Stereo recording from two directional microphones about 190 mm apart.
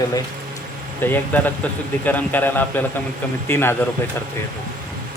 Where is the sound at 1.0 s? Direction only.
10° left (ahead or behind).